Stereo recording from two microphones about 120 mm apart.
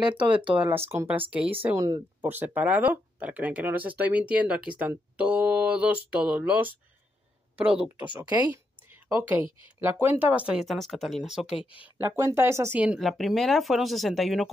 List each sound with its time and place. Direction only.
0.2 s speech: 45° right (ahead or behind)
0.6 s speech: 20° right (ahead or behind)
10.7 s speech: centre (ahead or behind)
12.2 s speech: 25° right (ahead or behind)
12.8 s speech: 5° right (ahead or behind)